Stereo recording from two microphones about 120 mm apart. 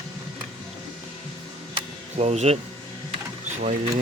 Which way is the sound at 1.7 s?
65° right (ahead or behind).